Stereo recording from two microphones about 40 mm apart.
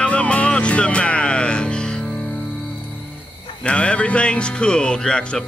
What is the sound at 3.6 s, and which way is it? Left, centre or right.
Speech, left.